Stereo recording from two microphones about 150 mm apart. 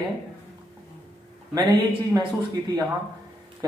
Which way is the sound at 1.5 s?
30° right (ahead or behind).